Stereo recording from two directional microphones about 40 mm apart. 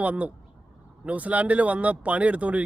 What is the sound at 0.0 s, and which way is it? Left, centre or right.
Speech, right.